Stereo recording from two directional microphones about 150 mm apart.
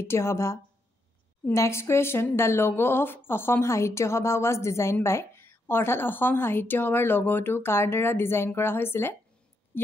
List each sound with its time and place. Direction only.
0.0 s speech: 15° left (ahead or behind)